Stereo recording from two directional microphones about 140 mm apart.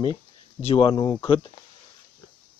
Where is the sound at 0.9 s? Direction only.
25° left (ahead or behind).